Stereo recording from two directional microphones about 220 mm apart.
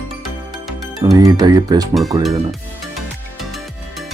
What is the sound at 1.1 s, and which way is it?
Speech, 15° right (ahead or behind).